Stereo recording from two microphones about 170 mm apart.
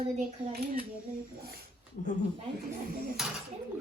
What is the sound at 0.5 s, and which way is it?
Speech, 65° right (ahead or behind).